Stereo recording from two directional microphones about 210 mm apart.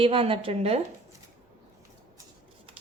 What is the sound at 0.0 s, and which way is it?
Speech, 25° right (ahead or behind).